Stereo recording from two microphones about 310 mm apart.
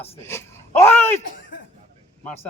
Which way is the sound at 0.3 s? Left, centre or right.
Centre.